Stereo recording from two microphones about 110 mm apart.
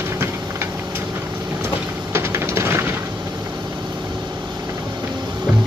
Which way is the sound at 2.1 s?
25° right (ahead or behind).